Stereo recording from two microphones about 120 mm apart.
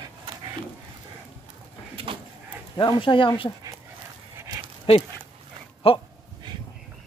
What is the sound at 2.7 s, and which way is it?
Speech, 45° left (ahead or behind).